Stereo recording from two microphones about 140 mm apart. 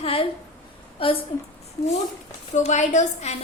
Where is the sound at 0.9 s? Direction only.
40° left (ahead or behind).